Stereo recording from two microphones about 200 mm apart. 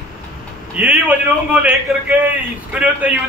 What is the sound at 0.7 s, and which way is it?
A man's voice, 5° right (ahead or behind).